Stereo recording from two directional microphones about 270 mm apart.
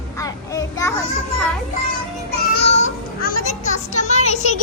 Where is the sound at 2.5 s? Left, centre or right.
Left.